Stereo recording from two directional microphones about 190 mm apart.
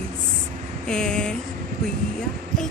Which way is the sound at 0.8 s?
5° left (ahead or behind).